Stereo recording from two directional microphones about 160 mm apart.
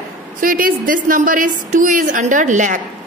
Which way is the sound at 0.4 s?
60° right (ahead or behind).